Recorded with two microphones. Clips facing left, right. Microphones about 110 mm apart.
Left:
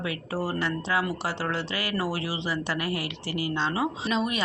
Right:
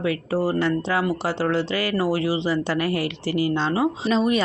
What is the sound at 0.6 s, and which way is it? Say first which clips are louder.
A woman's voice: right 5 dB; 35° right (ahead or behind).